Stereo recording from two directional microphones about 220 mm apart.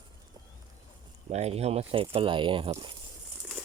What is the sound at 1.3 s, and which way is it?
Speech, 30° right (ahead or behind).